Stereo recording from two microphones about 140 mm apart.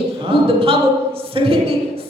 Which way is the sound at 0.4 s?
40° right (ahead or behind).